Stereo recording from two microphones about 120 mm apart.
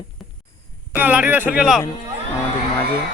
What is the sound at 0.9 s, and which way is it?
Speech, 15° right (ahead or behind).